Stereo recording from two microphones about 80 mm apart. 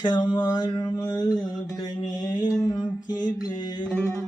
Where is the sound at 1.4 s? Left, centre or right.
Left.